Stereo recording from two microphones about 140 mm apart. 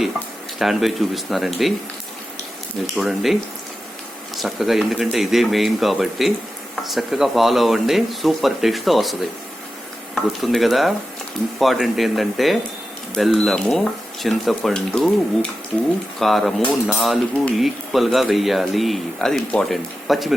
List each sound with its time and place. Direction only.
0.6 s speech: centre (ahead or behind)
3.0 s speech: centre (ahead or behind)
4.4 s speech: centre (ahead or behind)